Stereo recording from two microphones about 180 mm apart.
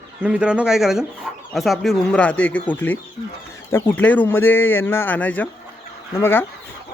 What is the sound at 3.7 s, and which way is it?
Speech, 10° left (ahead or behind).